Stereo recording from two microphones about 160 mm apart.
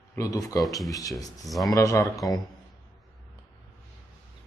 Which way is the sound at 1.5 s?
Centre (ahead or behind).